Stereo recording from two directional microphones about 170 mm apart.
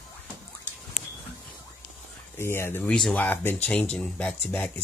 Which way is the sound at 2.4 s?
15° left (ahead or behind).